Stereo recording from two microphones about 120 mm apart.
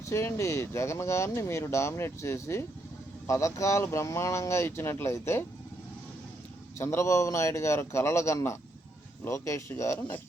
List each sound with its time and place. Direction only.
0.1 s speech: 25° left (ahead or behind)
6.7 s speech: 20° left (ahead or behind)